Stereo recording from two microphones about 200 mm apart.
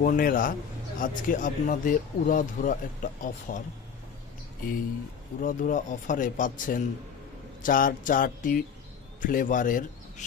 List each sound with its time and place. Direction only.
0.0 s a man's voice: 45° left (ahead or behind)
5.4 s a man's voice: 40° left (ahead or behind)
7.6 s a sound: 40° left (ahead or behind)
9.2 s speech: 40° left (ahead or behind)